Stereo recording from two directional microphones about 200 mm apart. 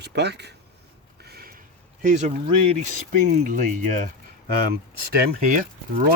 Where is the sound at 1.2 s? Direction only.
50° right (ahead or behind).